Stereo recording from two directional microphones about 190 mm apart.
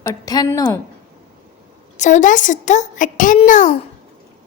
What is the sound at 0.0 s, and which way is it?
Speech, 20° left (ahead or behind).